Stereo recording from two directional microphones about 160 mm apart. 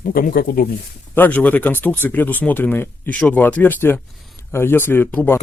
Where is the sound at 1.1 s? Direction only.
10° left (ahead or behind).